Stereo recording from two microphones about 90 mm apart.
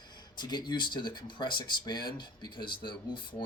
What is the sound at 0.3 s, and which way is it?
Speech, 55° left (ahead or behind).